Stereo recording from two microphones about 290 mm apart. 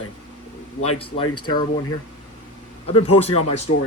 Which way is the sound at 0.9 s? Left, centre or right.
Centre.